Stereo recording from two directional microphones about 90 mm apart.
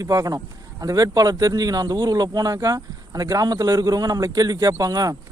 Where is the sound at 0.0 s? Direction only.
40° right (ahead or behind).